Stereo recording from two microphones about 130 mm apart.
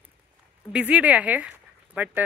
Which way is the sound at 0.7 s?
10° right (ahead or behind).